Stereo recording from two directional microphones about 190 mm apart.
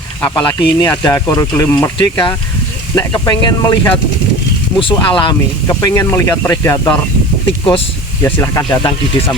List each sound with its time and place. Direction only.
0.2 s speech: 20° left (ahead or behind)
7.4 s speech: 25° left (ahead or behind)
8.2 s speech: 15° left (ahead or behind)